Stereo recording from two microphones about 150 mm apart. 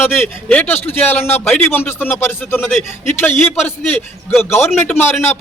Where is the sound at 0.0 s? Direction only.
10° left (ahead or behind).